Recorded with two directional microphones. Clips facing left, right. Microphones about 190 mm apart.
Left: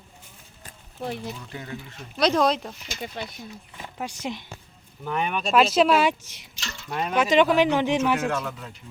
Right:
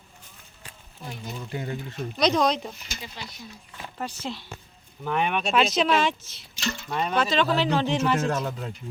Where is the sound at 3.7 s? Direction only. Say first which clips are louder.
Right 1 dB; 15° left (ahead or behind).